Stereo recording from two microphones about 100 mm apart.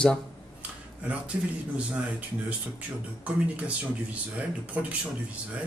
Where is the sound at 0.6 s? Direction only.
15° right (ahead or behind).